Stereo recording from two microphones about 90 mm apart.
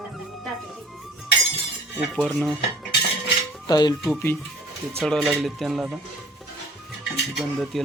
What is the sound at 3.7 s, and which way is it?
Speech, 45° left (ahead or behind).